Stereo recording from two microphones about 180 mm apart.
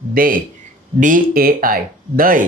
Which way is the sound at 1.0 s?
50° right (ahead or behind).